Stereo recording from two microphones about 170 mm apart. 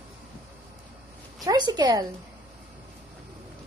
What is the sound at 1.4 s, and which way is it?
Speech, 20° right (ahead or behind).